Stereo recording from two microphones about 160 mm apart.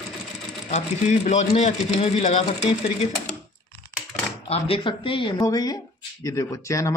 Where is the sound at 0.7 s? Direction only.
45° left (ahead or behind).